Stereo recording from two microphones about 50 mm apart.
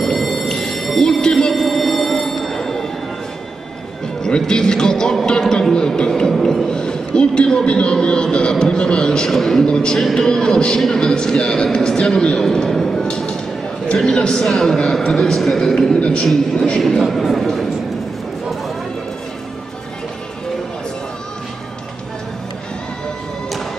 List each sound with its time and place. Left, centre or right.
0.0 s a sound: centre
1.2 s music: centre
4.2 s a man's voice: centre
16.0 s a man's voice: left
16.8 s a man's voice: centre